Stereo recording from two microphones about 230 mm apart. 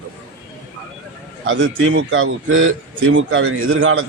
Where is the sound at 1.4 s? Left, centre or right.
Right.